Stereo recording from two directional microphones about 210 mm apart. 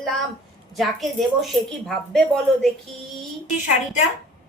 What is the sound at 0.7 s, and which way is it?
Speech, centre (ahead or behind).